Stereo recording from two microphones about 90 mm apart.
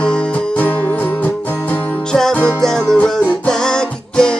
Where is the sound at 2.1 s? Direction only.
5° left (ahead or behind).